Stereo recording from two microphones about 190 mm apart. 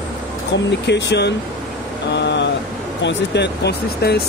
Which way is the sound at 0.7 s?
65° left (ahead or behind).